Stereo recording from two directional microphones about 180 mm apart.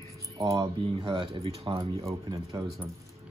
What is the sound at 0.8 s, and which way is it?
Speech, 30° right (ahead or behind).